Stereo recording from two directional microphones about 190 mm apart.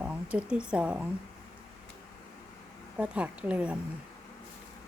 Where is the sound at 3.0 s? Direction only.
5° right (ahead or behind).